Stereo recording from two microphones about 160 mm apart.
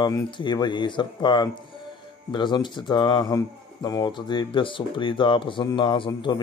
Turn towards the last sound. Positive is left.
turn(degrees=30)  # may be behind; listen again after turning